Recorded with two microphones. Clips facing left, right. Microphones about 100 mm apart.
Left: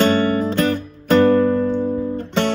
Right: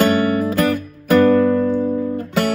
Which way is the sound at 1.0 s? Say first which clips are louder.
Right 1 dB; 25° left (ahead or behind).